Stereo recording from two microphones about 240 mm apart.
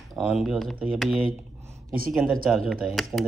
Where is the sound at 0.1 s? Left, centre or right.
Centre.